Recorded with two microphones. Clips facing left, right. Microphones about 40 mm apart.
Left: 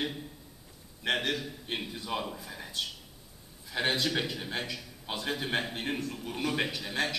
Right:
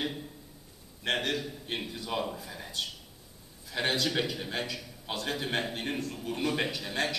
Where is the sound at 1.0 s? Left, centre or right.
Centre.